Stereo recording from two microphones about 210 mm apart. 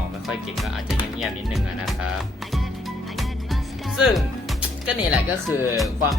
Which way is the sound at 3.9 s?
Centre (ahead or behind).